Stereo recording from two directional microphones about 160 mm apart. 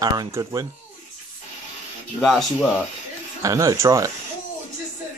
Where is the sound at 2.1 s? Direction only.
Centre (ahead or behind).